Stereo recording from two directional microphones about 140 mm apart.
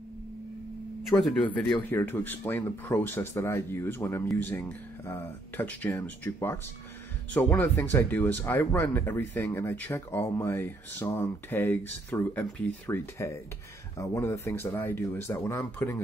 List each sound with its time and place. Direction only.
1.2 s speech: 10° left (ahead or behind)